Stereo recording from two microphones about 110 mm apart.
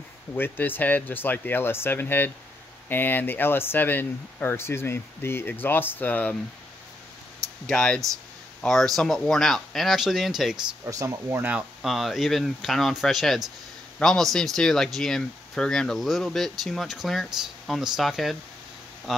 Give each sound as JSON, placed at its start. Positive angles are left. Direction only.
{"t": 0.3, "sound": "speech", "side_deg": 20}
{"t": 7.6, "sound": "speech", "side_deg": 10}
{"t": 10.9, "sound": "speech", "side_deg": -30}
{"t": 11.8, "sound": "speech", "side_deg": 0}